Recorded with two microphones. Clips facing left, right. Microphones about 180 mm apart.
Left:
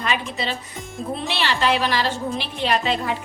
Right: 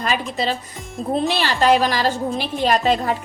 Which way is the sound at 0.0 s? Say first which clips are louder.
Right 3 dB; 40° right (ahead or behind).